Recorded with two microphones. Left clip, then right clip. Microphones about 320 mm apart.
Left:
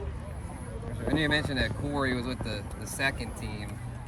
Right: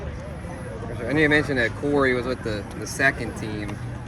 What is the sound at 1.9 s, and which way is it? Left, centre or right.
Speech, left.